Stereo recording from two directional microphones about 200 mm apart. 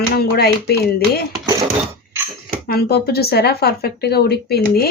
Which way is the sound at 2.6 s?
50° left (ahead or behind).